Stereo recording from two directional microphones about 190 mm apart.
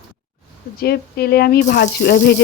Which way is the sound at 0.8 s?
55° left (ahead or behind).